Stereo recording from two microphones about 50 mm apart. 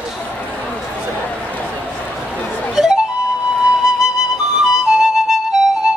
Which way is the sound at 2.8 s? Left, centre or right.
Centre.